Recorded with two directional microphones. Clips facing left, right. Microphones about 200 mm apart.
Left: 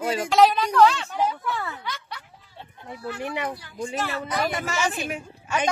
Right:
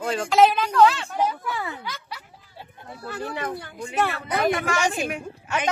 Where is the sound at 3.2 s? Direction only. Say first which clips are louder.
Even; 20° left (ahead or behind).